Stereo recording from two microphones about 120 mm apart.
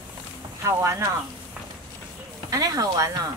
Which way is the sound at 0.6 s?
25° right (ahead or behind).